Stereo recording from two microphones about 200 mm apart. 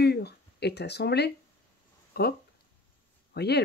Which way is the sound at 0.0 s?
55° left (ahead or behind).